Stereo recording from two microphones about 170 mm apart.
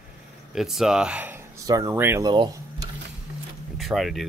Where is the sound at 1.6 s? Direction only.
20° right (ahead or behind).